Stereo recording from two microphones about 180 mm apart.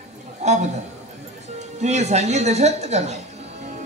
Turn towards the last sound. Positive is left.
turn(degrees=-40)  # may be behind; listen again after turning